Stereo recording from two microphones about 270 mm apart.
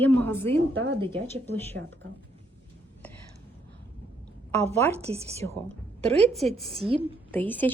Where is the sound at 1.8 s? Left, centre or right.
Right.